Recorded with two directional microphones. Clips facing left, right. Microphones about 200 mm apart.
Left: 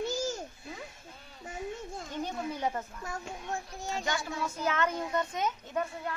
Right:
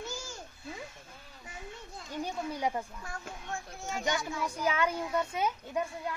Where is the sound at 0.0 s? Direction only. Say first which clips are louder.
Left 9 dB; 40° left (ahead or behind).